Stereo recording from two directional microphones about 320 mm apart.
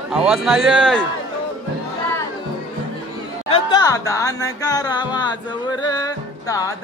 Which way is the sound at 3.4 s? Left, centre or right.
Centre.